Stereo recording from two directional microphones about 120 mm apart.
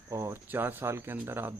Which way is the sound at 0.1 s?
25° right (ahead or behind).